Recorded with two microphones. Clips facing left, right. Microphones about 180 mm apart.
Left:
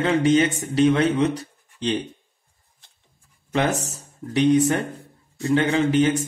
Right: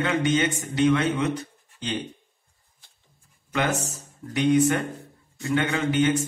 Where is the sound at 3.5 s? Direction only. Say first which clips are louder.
Left 3 dB; 30° left (ahead or behind).